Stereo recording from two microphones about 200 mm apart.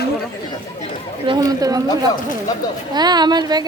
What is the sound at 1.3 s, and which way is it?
Speech, 20° right (ahead or behind).